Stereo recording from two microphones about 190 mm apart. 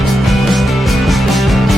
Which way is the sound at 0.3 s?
Centre (ahead or behind).